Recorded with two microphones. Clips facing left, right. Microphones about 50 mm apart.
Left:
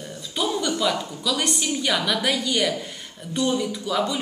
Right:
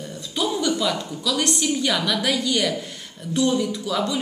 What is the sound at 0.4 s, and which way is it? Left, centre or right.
Speech, centre.